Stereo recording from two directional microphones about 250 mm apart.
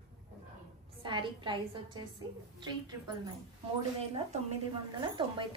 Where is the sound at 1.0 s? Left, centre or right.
Centre.